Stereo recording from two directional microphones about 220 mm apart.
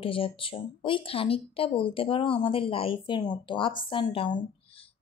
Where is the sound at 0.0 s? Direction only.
25° left (ahead or behind).